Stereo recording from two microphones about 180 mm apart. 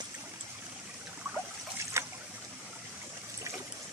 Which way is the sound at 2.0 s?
15° right (ahead or behind).